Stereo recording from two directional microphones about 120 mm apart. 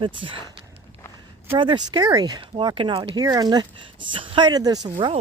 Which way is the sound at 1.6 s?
40° right (ahead or behind).